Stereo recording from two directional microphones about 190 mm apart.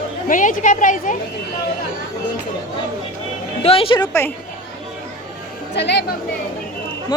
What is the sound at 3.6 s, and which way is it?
Speech, 30° left (ahead or behind).